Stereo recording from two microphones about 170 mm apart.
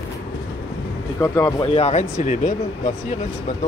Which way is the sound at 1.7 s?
40° left (ahead or behind).